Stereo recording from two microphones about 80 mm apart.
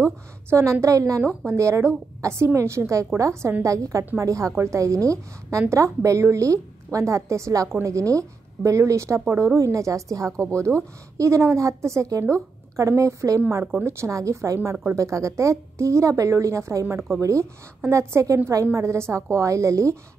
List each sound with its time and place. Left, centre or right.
0.0 s a woman's voice: right